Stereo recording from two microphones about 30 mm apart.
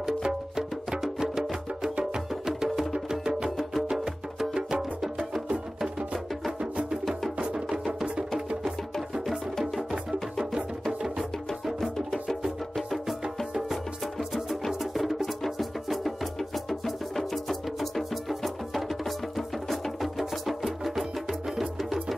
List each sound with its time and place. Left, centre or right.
0.0 s music: centre
3.4 s music: centre
3.9 s music: centre
7.5 s music: right
10.9 s music: right
12.3 s music: centre
14.7 s music: centre